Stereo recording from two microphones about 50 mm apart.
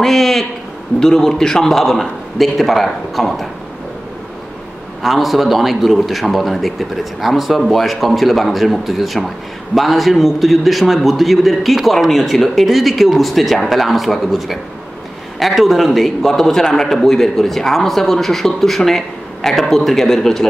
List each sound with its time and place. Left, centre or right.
0.0 s a sound: centre
0.9 s a man's voice: centre
5.0 s a man's voice: centre